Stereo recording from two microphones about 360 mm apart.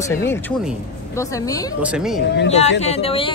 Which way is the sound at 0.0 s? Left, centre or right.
Centre.